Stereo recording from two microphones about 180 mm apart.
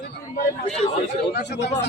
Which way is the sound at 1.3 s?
70° left (ahead or behind).